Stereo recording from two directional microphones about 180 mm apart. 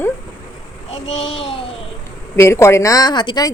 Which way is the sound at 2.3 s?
15° left (ahead or behind).